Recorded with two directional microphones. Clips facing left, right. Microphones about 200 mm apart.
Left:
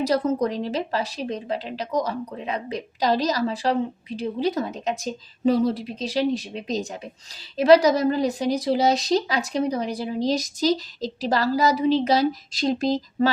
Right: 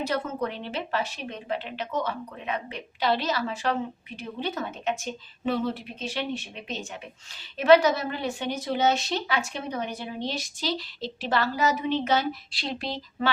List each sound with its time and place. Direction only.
0.0 s a woman's voice: 40° left (ahead or behind)